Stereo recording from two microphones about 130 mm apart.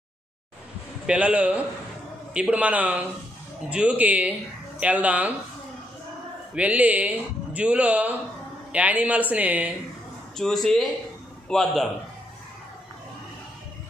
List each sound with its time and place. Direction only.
1.0 s speech: 10° right (ahead or behind)
6.5 s speech: 10° right (ahead or behind)
10.3 s speech: 5° left (ahead or behind)